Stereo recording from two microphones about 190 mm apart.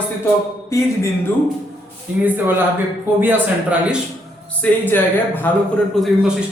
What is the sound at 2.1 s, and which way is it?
A man's voice, 10° right (ahead or behind).